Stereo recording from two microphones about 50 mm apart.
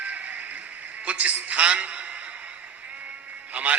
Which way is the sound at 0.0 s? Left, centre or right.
Right.